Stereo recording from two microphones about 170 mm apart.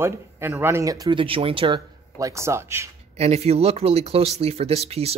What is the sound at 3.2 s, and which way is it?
Speech, 40° right (ahead or behind).